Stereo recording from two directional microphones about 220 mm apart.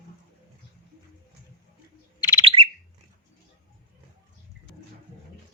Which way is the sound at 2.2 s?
20° left (ahead or behind).